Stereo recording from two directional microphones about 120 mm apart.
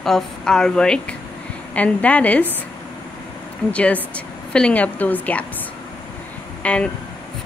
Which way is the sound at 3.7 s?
10° left (ahead or behind).